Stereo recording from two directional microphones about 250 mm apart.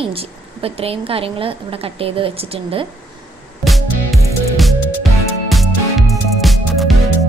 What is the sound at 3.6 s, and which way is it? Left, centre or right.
Music, centre.